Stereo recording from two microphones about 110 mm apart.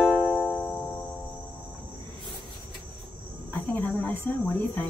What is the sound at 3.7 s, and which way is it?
Cricket, 15° left (ahead or behind).